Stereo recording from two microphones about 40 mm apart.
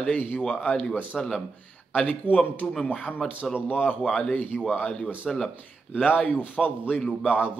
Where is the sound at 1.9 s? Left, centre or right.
Left.